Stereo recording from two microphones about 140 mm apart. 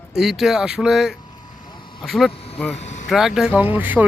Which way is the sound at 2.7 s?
55° left (ahead or behind).